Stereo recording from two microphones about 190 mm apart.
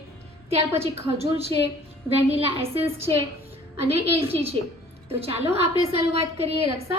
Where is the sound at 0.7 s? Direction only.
15° right (ahead or behind).